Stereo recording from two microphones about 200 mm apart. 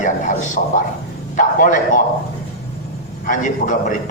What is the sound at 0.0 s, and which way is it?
A man's voice, 40° left (ahead or behind).